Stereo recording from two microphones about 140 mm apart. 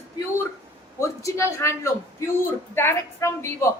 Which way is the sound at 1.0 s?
20° left (ahead or behind).